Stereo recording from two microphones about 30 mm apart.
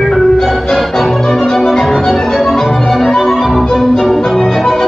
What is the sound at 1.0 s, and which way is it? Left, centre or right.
Music, centre.